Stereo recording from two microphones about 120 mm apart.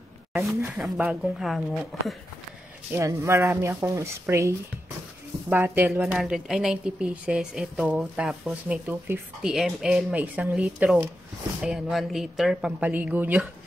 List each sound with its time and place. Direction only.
0.9 s speech: 5° right (ahead or behind)
2.9 s a woman's voice: 25° right (ahead or behind)
6.1 s a woman's voice: 5° right (ahead or behind)
9.4 s a woman's voice: 5° right (ahead or behind)